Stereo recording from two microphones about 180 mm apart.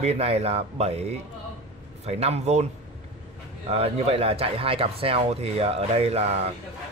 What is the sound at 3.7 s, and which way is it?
Speech, 35° right (ahead or behind).